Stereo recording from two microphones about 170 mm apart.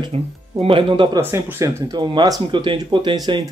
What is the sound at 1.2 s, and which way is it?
Speech, 15° right (ahead or behind).